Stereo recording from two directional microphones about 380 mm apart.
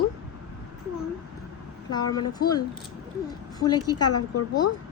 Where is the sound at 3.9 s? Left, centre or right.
Left.